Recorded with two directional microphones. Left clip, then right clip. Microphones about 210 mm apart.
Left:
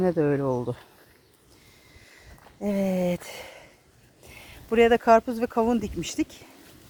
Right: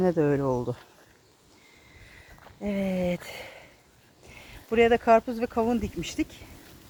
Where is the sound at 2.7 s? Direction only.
25° left (ahead or behind).